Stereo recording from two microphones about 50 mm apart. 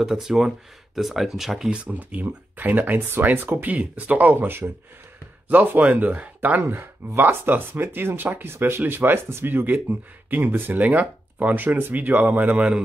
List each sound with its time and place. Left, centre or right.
0.0 s speech: centre
1.7 s speech: right
2.0 s speech: right
6.6 s speech: right
10.5 s speech: right
10.8 s speech: right